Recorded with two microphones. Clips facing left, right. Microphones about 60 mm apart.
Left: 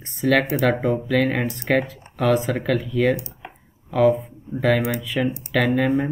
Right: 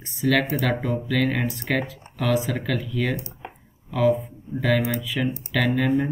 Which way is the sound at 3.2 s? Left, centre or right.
Right.